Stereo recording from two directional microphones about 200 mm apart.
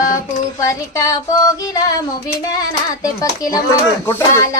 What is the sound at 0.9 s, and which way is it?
Music, 15° left (ahead or behind).